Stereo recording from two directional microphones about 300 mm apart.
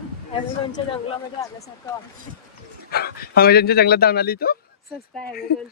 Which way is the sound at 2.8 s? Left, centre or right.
Left.